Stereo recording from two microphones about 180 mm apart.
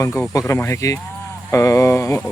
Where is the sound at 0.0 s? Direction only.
15° left (ahead or behind).